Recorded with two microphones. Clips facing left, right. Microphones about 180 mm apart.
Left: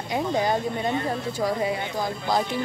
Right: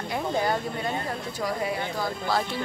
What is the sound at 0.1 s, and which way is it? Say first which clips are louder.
Speech: left 3 dB; 20° left (ahead or behind).